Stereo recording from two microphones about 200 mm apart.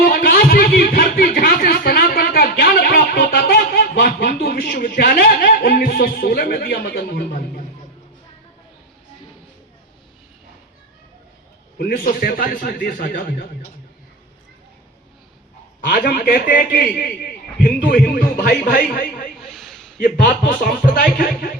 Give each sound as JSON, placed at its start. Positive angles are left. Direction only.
{"t": 0.0, "sound": "music", "side_deg": 45}
{"t": 11.8, "sound": "a man's voice", "side_deg": 50}
{"t": 15.8, "sound": "a man's voice", "side_deg": 50}
{"t": 19.4, "sound": "a sound", "side_deg": 0}
{"t": 20.0, "sound": "a man's voice", "side_deg": 45}